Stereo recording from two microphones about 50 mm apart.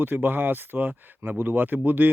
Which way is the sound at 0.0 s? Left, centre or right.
Right.